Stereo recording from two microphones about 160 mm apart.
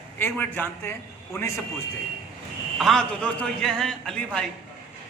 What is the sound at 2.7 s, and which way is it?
A man's voice, centre (ahead or behind).